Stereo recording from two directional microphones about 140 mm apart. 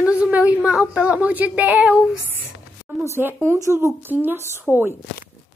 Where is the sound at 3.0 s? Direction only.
20° right (ahead or behind).